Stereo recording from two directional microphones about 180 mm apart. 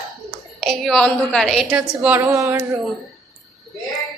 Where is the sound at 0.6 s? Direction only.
Centre (ahead or behind).